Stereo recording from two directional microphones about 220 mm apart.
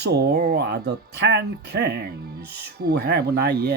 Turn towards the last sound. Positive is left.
turn(degrees=-50)  # may be behind; listen again after turning